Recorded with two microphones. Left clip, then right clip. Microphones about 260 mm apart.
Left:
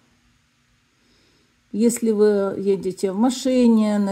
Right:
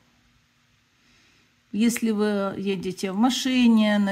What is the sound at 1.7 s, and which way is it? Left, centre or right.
Speech, centre.